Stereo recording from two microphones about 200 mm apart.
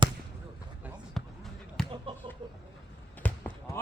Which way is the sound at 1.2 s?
Centre (ahead or behind).